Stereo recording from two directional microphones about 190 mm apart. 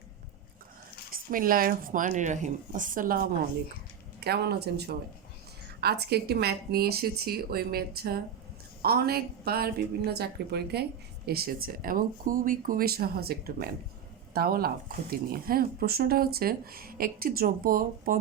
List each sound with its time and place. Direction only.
1.1 s speech: 50° right (ahead or behind)
4.2 s a woman's voice: 60° right (ahead or behind)